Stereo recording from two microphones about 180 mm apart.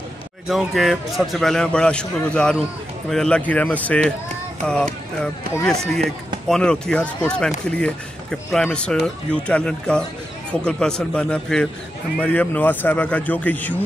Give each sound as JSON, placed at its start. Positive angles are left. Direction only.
{"t": 0.5, "sound": "speech", "side_deg": 0}